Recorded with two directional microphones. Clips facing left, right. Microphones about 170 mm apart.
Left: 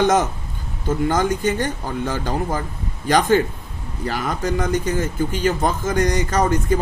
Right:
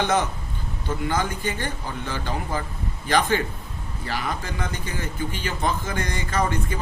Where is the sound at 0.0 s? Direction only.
45° left (ahead or behind).